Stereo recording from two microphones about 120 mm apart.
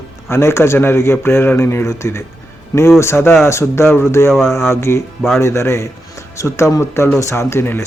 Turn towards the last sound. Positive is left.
turn(degrees=20)  # may be behind; listen again after turning